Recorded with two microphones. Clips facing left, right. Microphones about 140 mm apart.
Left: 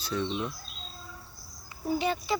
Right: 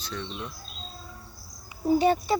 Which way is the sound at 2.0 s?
45° right (ahead or behind).